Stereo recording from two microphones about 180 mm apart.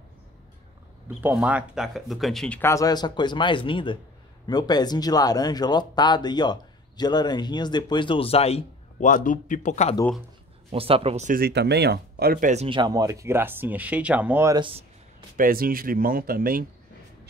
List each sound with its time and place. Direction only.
1.0 s speech: 10° right (ahead or behind); by 9.9 s 40° left (ahead or behind)
10.7 s speech: 30° right (ahead or behind)
11.3 s speech: 65° right (ahead or behind); by 12.6 s 45° right (ahead or behind)
12.6 s speech: 25° right (ahead or behind); by 14.5 s 10° right (ahead or behind)
14.5 s a sound: 30° right (ahead or behind)
15.3 s speech: 50° right (ahead or behind)